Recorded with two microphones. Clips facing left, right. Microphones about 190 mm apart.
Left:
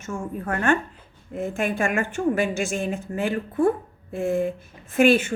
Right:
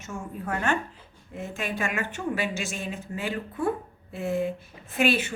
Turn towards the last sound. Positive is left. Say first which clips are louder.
# left 7 dB
turn(degrees=50)  # may be behind; listen again after turning